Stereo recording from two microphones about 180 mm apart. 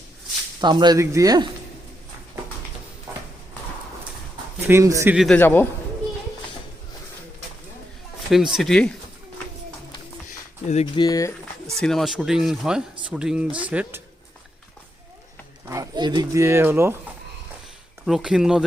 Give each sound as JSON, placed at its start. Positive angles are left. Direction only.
{"t": 0.6, "sound": "speech", "side_deg": -25}
{"t": 4.6, "sound": "speech", "side_deg": -15}
{"t": 5.1, "sound": "speech", "side_deg": 0}
{"t": 5.4, "sound": "a man's voice", "side_deg": 10}
{"t": 8.3, "sound": "speech", "side_deg": 0}
{"t": 10.7, "sound": "speech", "side_deg": 35}
{"t": 11.0, "sound": "speech", "side_deg": 20}
{"t": 11.8, "sound": "speech", "side_deg": 0}
{"t": 15.6, "sound": "speech", "side_deg": -20}
{"t": 18.0, "sound": "speech", "side_deg": -5}